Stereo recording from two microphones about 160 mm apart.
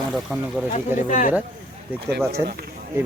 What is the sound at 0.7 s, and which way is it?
Speech, 55° left (ahead or behind).